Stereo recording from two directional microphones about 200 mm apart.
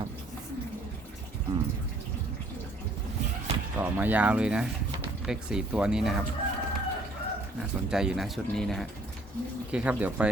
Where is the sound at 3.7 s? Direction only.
10° right (ahead or behind).